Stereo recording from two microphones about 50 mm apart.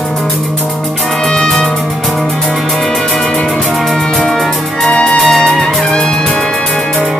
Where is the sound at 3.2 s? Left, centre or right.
Left.